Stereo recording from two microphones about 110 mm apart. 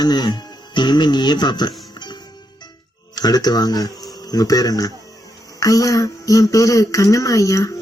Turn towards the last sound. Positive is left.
turn(degrees=30)  # may be behind; listen again after turning